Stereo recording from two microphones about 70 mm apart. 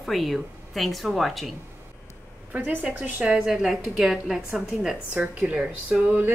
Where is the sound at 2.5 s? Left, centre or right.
Right.